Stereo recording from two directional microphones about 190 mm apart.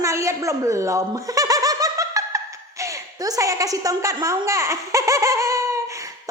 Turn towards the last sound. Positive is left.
turn(degrees=-15)  # may be behind; listen again after turning